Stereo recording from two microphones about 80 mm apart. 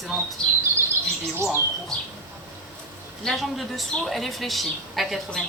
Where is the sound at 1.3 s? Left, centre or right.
Right.